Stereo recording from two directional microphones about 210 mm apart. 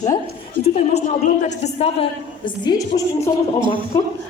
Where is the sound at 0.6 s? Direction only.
30° left (ahead or behind).